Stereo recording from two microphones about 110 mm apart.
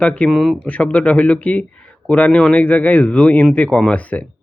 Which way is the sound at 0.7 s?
10° left (ahead or behind).